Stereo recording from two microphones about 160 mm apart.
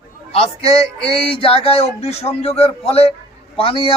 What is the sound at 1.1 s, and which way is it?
A man's voice, 35° left (ahead or behind).